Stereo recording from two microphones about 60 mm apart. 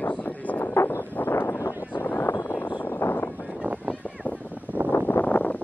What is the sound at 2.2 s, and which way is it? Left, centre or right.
Vehicle, left.